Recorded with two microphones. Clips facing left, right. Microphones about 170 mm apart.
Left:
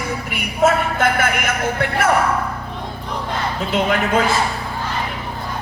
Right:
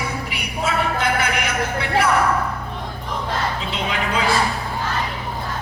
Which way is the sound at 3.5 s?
50° left (ahead or behind).